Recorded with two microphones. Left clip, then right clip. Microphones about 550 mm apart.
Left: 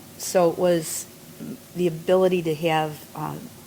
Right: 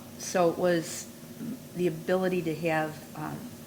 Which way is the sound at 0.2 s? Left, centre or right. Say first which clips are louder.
Left 6 dB; left.